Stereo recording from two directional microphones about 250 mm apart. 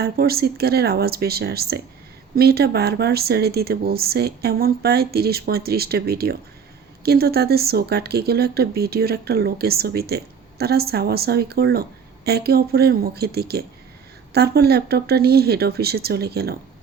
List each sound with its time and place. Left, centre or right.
0.0 s speech: right